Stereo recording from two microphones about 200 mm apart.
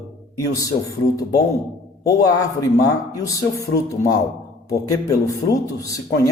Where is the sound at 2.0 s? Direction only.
15° left (ahead or behind).